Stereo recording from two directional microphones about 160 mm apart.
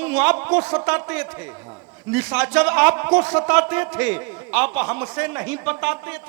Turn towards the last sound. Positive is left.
turn(degrees=-10)  # may be behind; listen again after turning